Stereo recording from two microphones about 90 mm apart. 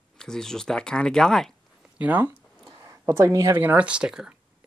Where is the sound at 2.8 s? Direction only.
30° right (ahead or behind).